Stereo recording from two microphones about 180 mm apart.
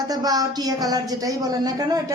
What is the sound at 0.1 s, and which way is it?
A woman's voice, 20° right (ahead or behind).